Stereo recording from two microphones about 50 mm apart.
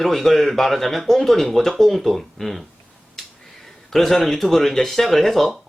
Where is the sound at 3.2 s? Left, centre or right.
Centre.